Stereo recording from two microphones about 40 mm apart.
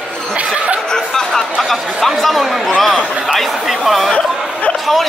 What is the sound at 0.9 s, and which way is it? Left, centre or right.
Chatter, centre.